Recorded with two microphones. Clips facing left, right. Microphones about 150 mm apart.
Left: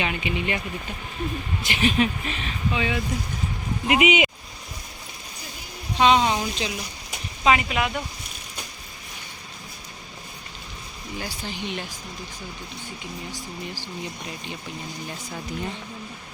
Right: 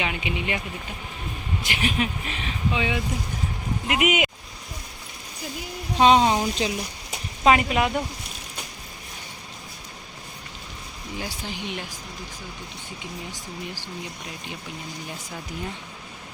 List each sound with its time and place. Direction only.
0.0 s speech: 10° right (ahead or behind)
1.6 s speech: 10° right (ahead or behind)
3.8 s speech: centre (ahead or behind)
6.0 s speech: 40° right (ahead or behind)
11.2 s speech: 15° right (ahead or behind)